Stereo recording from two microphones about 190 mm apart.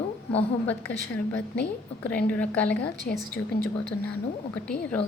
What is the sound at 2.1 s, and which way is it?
Speech, 10° left (ahead or behind).